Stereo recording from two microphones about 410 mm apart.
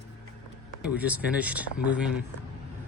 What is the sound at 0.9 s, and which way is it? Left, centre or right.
Speech, centre.